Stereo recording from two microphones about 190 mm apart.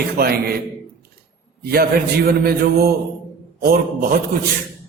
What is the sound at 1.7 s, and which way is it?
Speech, 55° right (ahead or behind).